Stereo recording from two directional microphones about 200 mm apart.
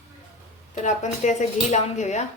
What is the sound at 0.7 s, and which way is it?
A woman's voice, 35° left (ahead or behind).